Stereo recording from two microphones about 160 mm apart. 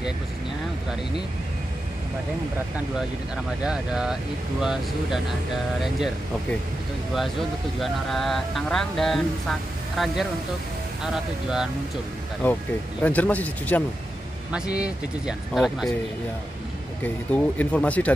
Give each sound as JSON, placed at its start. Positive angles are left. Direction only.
{"t": 3.6, "sound": "speech", "side_deg": -5}
{"t": 7.2, "sound": "speech", "side_deg": 0}
{"t": 12.4, "sound": "speech", "side_deg": 10}
{"t": 14.5, "sound": "speech", "side_deg": -5}
{"t": 17.0, "sound": "speech", "side_deg": 10}